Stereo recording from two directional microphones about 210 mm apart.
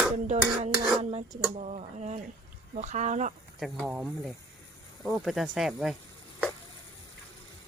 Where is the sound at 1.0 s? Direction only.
30° right (ahead or behind).